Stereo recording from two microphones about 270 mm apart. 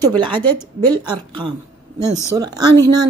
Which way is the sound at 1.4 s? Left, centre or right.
Centre.